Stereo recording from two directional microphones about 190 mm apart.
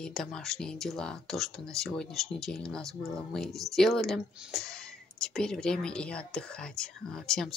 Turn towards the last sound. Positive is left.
turn(degrees=0)  # may be behind; listen again after turning